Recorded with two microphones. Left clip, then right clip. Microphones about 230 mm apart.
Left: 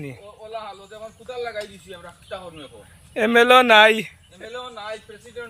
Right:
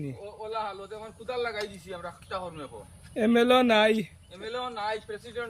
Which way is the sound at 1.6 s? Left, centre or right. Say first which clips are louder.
Left 2 dB; right.